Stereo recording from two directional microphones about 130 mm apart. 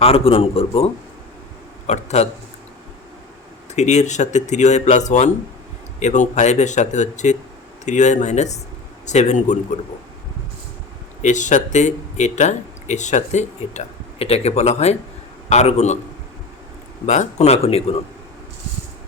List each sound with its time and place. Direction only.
0.0 s a man's voice: 45° left (ahead or behind)
1.9 s speech: 60° left (ahead or behind)
3.8 s speech: 60° left (ahead or behind)
11.2 s speech: 70° left (ahead or behind)
17.1 s a man's voice: 60° left (ahead or behind)